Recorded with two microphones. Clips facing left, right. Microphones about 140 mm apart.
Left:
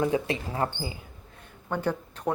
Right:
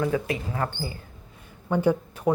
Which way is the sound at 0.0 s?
25° left (ahead or behind).